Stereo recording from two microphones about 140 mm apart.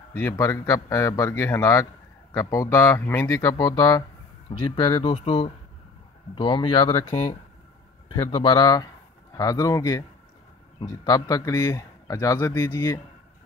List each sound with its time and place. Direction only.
0.1 s a man's voice: 20° left (ahead or behind)
4.6 s speech: 35° left (ahead or behind)
7.1 s speech: 55° left (ahead or behind)
8.2 s a man's voice: 30° left (ahead or behind)